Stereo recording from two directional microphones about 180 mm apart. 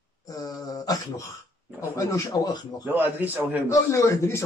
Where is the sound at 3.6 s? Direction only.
15° left (ahead or behind).